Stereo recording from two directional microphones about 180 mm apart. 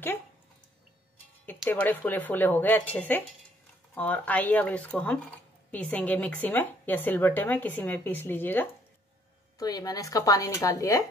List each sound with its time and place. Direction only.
1.7 s speech: 10° left (ahead or behind)
9.6 s speech: 20° left (ahead or behind)